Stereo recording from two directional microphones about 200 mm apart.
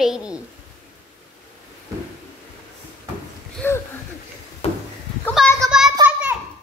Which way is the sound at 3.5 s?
10° left (ahead or behind).